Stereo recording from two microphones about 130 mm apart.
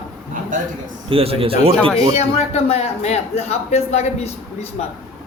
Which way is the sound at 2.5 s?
55° left (ahead or behind).